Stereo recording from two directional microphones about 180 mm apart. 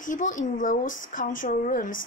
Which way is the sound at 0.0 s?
45° left (ahead or behind).